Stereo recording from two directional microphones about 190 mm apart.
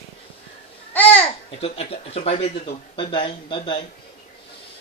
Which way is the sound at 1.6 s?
30° left (ahead or behind).